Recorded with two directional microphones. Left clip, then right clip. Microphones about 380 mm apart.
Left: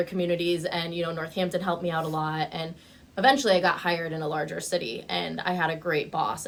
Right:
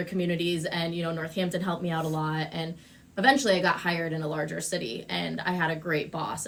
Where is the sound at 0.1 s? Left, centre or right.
Centre.